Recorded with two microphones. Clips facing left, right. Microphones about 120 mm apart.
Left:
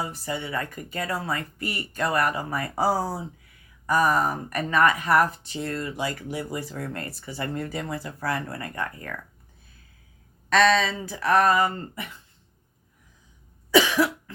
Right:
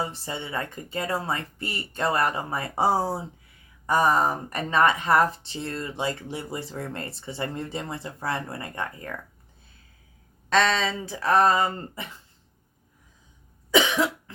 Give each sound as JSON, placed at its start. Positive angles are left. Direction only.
{"t": 0.0, "sound": "speech", "side_deg": -30}
{"t": 10.5, "sound": "speech", "side_deg": -25}
{"t": 13.7, "sound": "cough", "side_deg": -20}